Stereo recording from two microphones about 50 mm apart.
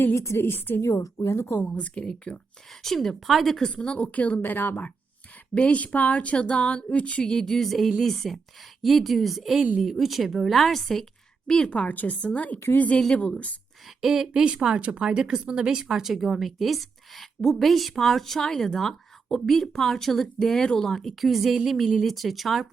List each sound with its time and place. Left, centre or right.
0.0 s a woman's voice: left
0.8 s a woman's voice: left
1.3 s a woman's voice: left
1.7 s speech: left
2.8 s speech: centre
3.7 s speech: left
5.5 s speech: left
7.3 s a woman's voice: centre
11.7 s a woman's voice: left
13.8 s speech: centre
14.4 s speech: centre